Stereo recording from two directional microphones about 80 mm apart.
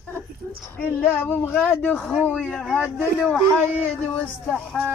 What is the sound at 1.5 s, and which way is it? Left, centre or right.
Female singing, centre.